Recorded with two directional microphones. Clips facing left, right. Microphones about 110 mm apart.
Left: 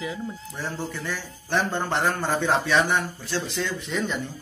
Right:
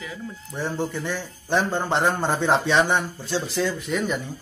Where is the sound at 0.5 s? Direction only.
15° right (ahead or behind).